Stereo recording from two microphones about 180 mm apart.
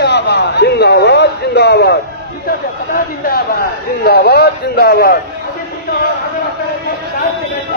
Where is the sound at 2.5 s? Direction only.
55° left (ahead or behind).